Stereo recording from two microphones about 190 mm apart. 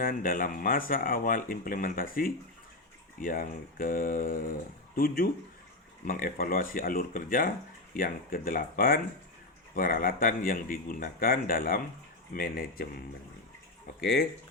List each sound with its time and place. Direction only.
0.0 s speech: 45° left (ahead or behind)
14.0 s speech: 55° left (ahead or behind)